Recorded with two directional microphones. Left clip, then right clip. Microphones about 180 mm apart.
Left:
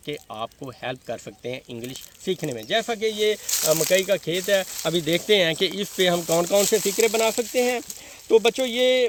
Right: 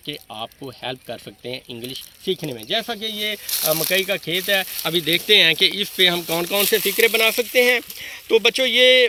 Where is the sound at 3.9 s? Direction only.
55° left (ahead or behind).